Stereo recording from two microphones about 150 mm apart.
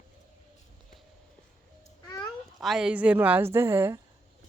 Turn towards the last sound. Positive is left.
turn(degrees=-15)  # may be behind; listen again after turning